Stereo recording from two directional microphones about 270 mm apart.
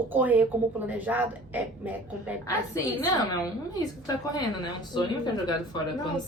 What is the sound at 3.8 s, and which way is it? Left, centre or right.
Speech, centre.